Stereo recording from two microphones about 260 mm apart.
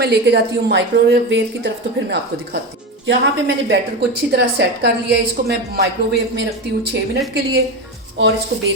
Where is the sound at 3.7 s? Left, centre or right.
Right.